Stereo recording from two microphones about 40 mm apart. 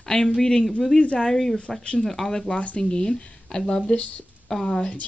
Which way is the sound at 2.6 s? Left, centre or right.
Left.